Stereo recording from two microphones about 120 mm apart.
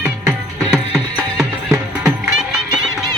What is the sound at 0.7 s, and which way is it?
Music, 5° left (ahead or behind).